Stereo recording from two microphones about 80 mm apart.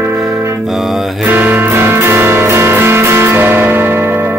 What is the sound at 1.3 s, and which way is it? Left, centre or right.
Music, right.